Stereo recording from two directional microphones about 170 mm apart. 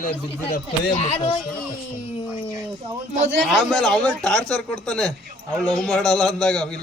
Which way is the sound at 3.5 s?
Centre (ahead or behind).